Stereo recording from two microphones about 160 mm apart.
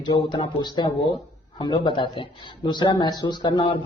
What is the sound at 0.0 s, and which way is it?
Speech, 25° left (ahead or behind).